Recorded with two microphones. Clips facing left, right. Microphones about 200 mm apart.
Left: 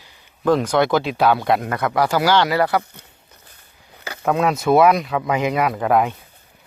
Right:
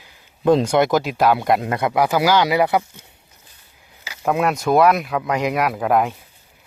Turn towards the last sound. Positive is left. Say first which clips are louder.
# left 1 dB
turn(degrees=0)  # may be behind; listen again after turning